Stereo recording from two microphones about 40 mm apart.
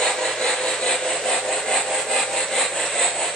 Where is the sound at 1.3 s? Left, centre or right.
Centre.